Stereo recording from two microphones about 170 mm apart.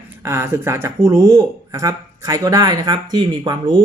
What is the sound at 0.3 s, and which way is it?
Speech, 15° right (ahead or behind).